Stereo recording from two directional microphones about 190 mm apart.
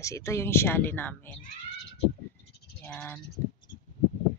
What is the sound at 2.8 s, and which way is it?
Speech, 10° left (ahead or behind).